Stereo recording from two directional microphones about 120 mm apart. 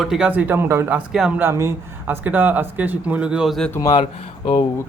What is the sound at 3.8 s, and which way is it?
Speech, 40° left (ahead or behind).